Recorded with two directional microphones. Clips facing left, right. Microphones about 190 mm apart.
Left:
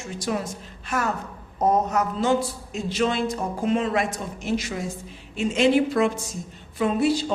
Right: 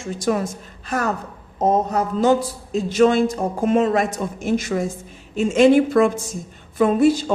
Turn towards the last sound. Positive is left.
turn(degrees=-50)  # may be behind; listen again after turning